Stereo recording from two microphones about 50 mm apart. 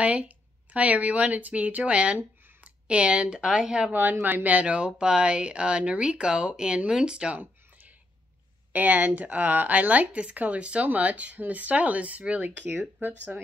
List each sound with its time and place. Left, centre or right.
0.0 s speech: right
3.9 s speech: right; by 7.3 s centre
7.3 s a sound: right
8.7 s speech: right